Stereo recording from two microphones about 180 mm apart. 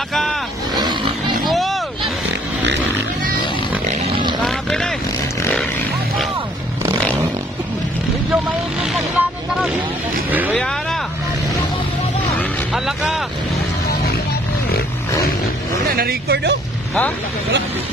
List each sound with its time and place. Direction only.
0.1 s roaring cats: centre (ahead or behind)
1.5 s vehicle: centre (ahead or behind)
4.4 s vehicle: 5° left (ahead or behind)
5.4 s a sound: 5° left (ahead or behind)
10.5 s vehicle: 5° left (ahead or behind)
12.4 s vehicle: centre (ahead or behind)
16.0 s speech: 60° right (ahead or behind)